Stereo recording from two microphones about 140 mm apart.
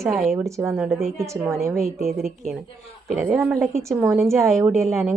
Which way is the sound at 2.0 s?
Centre (ahead or behind).